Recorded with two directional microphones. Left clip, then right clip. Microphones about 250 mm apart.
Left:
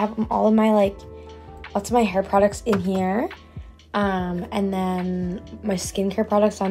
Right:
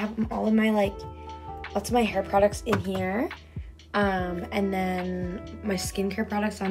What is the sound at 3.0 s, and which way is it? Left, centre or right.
Speech, centre.